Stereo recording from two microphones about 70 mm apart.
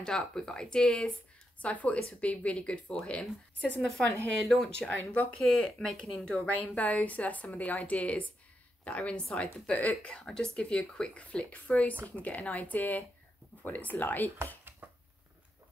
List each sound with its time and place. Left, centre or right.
0.0 s speech: centre
5.4 s a woman's voice: centre; by 14.3 s left
14.8 s a sound: right